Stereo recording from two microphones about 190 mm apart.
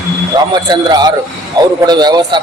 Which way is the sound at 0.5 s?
20° right (ahead or behind).